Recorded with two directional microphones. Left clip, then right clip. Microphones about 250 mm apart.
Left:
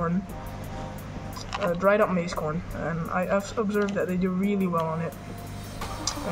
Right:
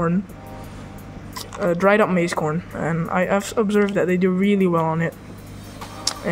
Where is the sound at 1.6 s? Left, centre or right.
Right.